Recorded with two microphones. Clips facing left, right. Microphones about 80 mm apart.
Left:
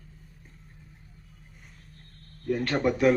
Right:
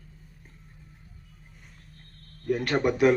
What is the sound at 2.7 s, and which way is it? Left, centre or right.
Speech, right.